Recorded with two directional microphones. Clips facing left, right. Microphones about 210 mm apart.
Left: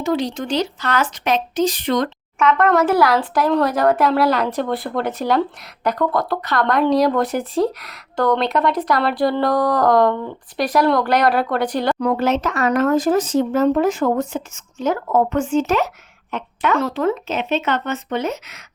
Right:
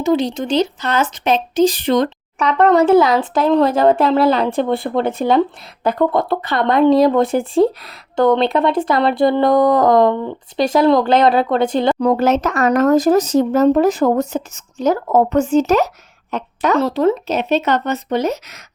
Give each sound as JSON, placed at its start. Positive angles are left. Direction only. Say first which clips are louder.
{"t": 0.0, "sound": "speech", "louder": "right 4 dB", "side_deg": -25}